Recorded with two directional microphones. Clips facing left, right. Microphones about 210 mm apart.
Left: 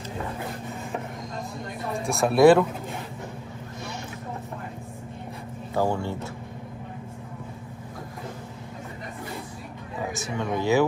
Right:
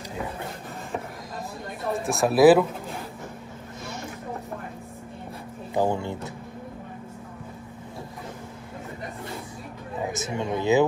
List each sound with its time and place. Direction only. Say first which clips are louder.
2.0 s speech: even; centre (ahead or behind)
5.8 s speech: right 1 dB; 20° right (ahead or behind)
10.1 s speech: left 1 dB; 20° right (ahead or behind)